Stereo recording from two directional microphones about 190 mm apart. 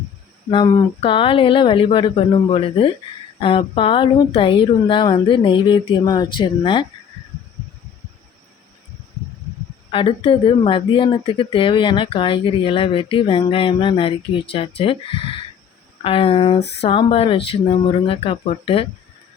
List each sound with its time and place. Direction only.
0.5 s speech: 20° left (ahead or behind)
9.9 s speech: 30° left (ahead or behind)